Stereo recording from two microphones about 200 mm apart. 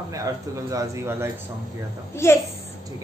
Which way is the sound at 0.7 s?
15° right (ahead or behind).